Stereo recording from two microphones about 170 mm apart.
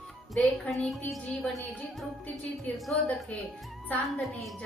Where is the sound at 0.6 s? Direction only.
5° left (ahead or behind).